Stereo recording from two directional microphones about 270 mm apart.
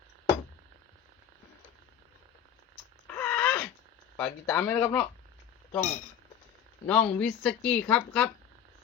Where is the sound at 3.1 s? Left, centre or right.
Centre.